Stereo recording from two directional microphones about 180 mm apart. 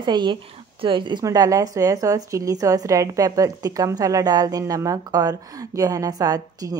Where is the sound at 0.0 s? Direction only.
25° right (ahead or behind).